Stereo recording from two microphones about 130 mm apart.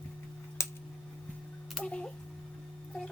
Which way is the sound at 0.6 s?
20° left (ahead or behind).